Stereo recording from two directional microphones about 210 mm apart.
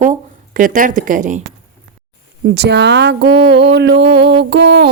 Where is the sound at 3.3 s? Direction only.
25° right (ahead or behind).